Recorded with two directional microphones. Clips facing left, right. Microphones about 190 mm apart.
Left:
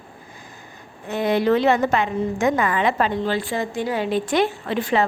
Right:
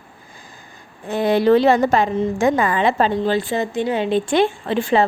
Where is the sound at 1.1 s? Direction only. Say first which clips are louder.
Right 4 dB; 35° right (ahead or behind).